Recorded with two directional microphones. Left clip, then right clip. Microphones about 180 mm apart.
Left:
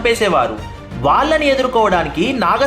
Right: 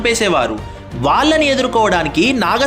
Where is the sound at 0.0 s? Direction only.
35° right (ahead or behind).